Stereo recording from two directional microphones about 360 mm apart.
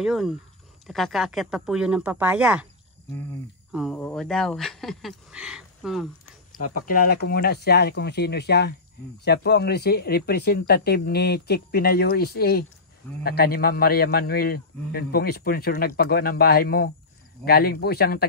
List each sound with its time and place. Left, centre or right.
0.0 s speech: centre
6.6 s a man's voice: left